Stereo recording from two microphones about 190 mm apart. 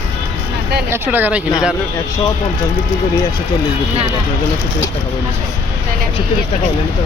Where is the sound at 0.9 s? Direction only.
10° right (ahead or behind).